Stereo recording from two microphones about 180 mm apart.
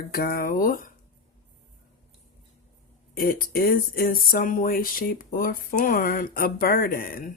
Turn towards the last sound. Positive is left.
turn(degrees=55)  # may be behind; listen again after turning